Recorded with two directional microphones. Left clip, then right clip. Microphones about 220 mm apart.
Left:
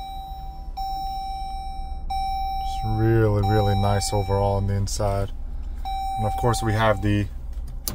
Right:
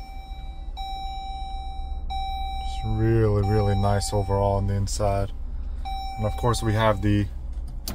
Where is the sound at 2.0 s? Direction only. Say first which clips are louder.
Left 5 dB; 20° left (ahead or behind).